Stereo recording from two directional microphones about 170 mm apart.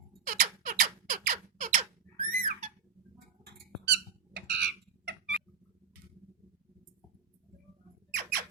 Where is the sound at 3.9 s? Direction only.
90° right.